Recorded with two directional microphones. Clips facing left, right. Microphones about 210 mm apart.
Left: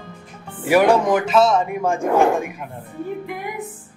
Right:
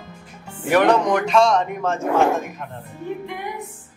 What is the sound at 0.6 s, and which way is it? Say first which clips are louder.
Speech: left 2 dB; 10° left (ahead or behind).